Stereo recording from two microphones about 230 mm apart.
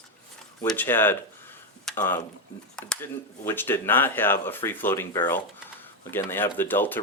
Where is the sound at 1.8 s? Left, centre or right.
Centre.